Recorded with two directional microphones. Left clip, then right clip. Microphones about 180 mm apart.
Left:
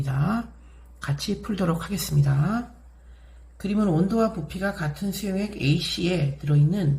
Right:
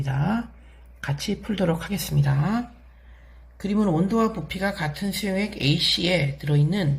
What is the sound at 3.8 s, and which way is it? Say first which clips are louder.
Speech: right 1 dB; 15° right (ahead or behind).